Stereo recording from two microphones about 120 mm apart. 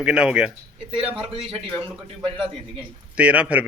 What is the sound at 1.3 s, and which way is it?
A man's voice, 50° right (ahead or behind).